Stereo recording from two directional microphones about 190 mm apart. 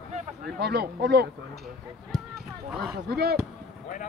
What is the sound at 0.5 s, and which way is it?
Speech, 60° right (ahead or behind).